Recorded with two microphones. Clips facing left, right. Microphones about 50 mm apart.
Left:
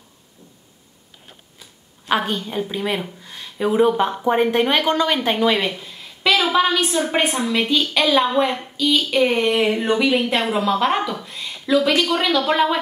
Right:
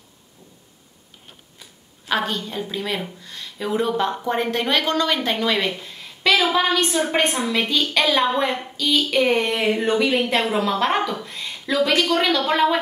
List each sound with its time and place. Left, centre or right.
2.0 s a woman's voice: centre
5.7 s a sound: centre
7.1 s a woman's voice: centre